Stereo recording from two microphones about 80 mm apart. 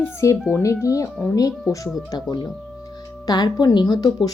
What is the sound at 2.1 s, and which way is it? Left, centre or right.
Speech, left.